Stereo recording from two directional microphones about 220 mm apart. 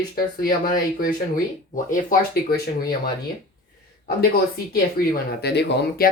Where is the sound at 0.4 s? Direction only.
40° left (ahead or behind).